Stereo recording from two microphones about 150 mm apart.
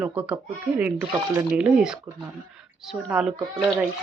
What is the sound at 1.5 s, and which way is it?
Speech, 5° right (ahead or behind).